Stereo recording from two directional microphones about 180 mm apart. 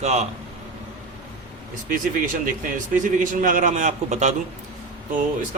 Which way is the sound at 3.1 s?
50° right (ahead or behind).